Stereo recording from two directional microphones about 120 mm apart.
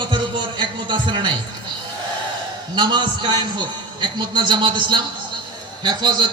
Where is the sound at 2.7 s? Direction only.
40° right (ahead or behind).